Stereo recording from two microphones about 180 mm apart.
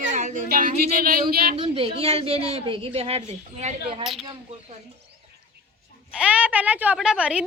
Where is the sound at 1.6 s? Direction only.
30° right (ahead or behind).